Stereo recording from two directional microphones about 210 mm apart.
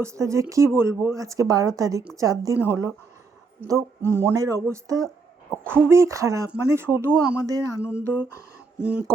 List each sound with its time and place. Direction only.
0.0 s speech: 15° right (ahead or behind)
5.0 s a sound: 5° right (ahead or behind)
5.9 s speech: 15° right (ahead or behind)